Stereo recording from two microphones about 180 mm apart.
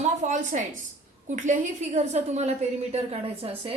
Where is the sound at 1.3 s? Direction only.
45° right (ahead or behind).